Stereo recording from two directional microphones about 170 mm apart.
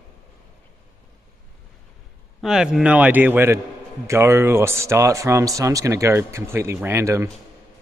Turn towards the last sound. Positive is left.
turn(degrees=-15)  # may be behind; listen again after turning